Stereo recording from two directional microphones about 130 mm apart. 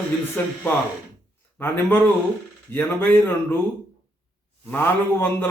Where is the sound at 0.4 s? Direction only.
15° left (ahead or behind).